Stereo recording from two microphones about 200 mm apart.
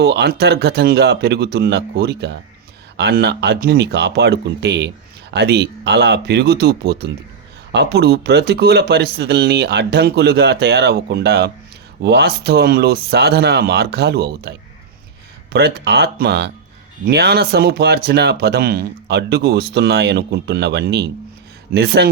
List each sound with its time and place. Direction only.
0.0 s speech: 55° right (ahead or behind)
15.5 s speech: 55° right (ahead or behind)